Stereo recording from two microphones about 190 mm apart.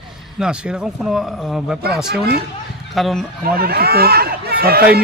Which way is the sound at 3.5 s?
55° right (ahead or behind).